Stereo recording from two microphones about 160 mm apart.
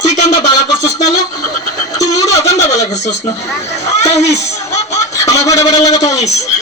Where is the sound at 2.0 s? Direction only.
20° left (ahead or behind).